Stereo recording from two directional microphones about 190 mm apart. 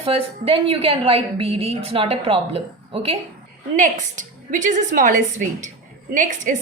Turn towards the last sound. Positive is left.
turn(degrees=-40)  # may be behind; listen again after turning